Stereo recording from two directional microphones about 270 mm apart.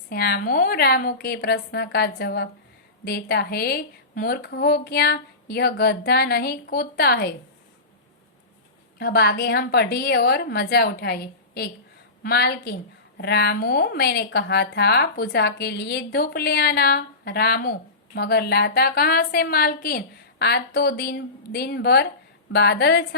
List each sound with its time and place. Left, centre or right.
0.1 s a woman's voice: left
9.0 s a woman's voice: left